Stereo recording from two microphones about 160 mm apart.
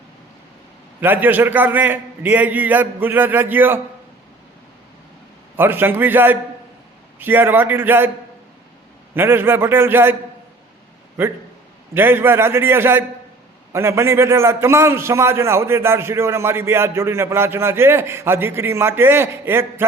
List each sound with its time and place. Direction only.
1.0 s a man's voice: 10° right (ahead or behind)
5.5 s a man's voice: 15° right (ahead or behind)
9.1 s a man's voice: 15° right (ahead or behind)
11.9 s a man's voice: 15° right (ahead or behind)